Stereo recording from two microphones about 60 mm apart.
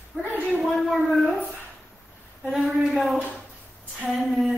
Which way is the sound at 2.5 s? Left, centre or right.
Centre.